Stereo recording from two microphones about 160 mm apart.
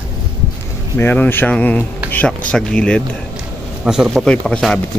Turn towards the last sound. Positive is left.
turn(degrees=5)  # may be behind; listen again after turning